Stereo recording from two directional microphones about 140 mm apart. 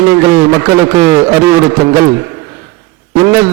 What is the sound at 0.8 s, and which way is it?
A man's voice, 15° right (ahead or behind).